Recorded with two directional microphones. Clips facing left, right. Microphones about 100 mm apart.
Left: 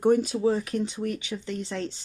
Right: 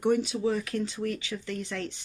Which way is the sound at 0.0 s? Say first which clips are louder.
Left 4 dB; 40° left (ahead or behind).